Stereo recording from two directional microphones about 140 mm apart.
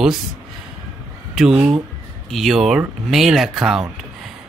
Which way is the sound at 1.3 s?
5° right (ahead or behind).